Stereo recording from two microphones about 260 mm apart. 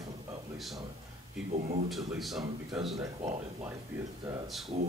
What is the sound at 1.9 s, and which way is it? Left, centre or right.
Speech, centre.